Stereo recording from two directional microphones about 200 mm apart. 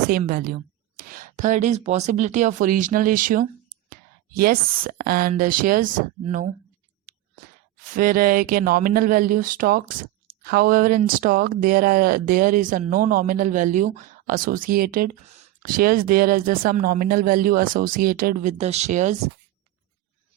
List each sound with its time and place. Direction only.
0.1 s a woman's voice: 45° right (ahead or behind)
7.9 s speech: 45° right (ahead or behind)